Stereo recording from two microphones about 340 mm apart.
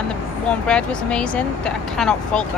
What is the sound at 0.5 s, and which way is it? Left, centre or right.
Speech, centre.